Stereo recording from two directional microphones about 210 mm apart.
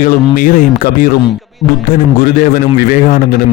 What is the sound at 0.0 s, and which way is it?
Speech, 40° left (ahead or behind).